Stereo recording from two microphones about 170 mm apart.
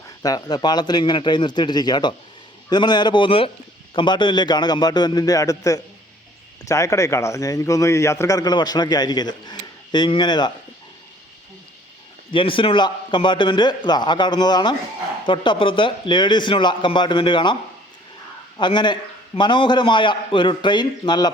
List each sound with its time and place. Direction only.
0.2 s a man's voice: 25° left (ahead or behind)
12.3 s a man's voice: 30° left (ahead or behind)